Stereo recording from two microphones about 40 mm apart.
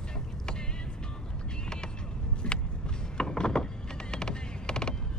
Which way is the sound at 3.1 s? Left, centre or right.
Centre.